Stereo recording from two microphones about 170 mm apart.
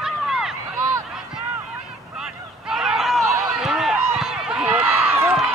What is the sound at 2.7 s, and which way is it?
Run, 5° right (ahead or behind).